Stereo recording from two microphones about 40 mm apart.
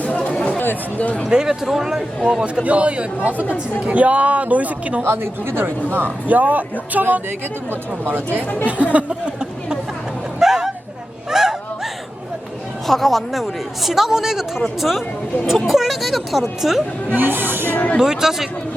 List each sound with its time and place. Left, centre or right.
0.3 s chatter: left
0.9 s speech: left
1.3 s speech: centre
2.2 s speech: right
5.0 s speech: right
6.2 s speech: right
7.3 s speech: right
8.6 s speech: right
10.4 s a sound: centre
12.9 s a woman's voice: centre
17.2 s speech: right
18.0 s speech: centre